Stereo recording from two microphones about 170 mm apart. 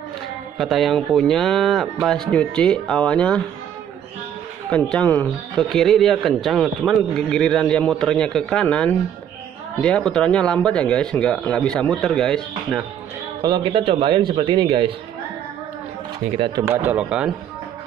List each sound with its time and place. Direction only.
0.6 s speech: centre (ahead or behind)
4.6 s speech: 5° left (ahead or behind)
13.4 s a man's voice: 25° right (ahead or behind)
16.6 s speech: 10° right (ahead or behind)